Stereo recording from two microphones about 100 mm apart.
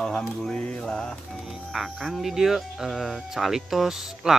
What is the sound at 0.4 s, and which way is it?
Mantra, 10° left (ahead or behind).